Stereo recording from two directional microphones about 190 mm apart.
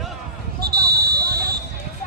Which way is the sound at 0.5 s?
55° right (ahead or behind).